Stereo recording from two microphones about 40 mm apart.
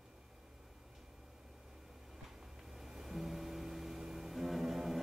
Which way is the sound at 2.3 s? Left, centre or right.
Centre.